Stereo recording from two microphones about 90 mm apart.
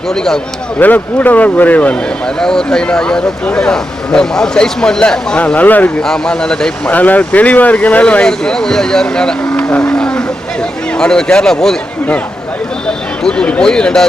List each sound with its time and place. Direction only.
0.8 s speech: 20° left (ahead or behind)
6.0 s speech: 5° left (ahead or behind)
13.2 s speech: 10° left (ahead or behind)